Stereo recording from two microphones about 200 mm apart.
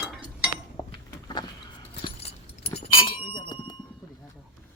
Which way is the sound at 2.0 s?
30° left (ahead or behind).